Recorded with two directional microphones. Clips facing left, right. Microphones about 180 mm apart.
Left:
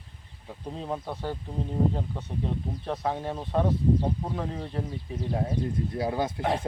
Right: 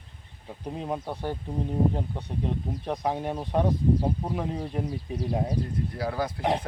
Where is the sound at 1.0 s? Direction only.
15° right (ahead or behind).